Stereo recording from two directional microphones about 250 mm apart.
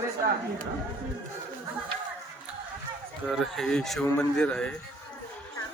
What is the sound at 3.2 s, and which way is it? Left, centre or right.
Speech, centre.